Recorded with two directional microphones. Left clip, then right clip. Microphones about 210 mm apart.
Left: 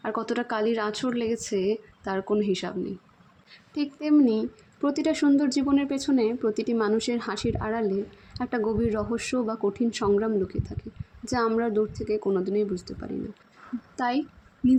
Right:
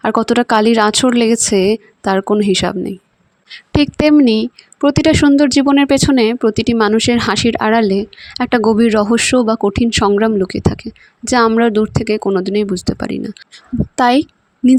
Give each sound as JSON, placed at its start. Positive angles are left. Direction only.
{"t": 0.0, "sound": "a woman's voice", "side_deg": -50}